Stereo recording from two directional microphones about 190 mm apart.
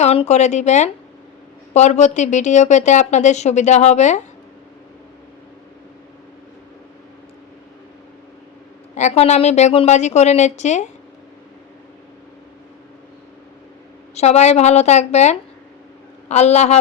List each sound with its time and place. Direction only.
0.0 s a woman's voice: 35° left (ahead or behind)
9.0 s a woman's voice: 35° left (ahead or behind)
14.2 s a woman's voice: 35° left (ahead or behind)